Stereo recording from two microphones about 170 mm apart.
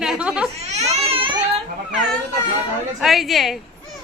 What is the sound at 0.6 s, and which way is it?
Baby cry, 40° right (ahead or behind).